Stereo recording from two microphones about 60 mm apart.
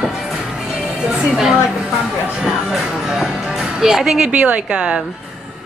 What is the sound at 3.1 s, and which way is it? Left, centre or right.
Music, centre.